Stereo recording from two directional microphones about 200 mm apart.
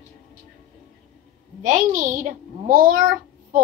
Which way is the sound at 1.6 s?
40° right (ahead or behind).